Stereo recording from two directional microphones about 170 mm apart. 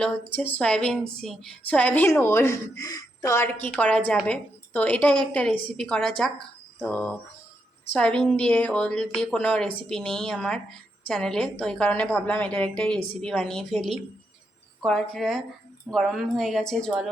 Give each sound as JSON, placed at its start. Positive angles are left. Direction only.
{"t": 0.0, "sound": "a woman's voice", "side_deg": 10}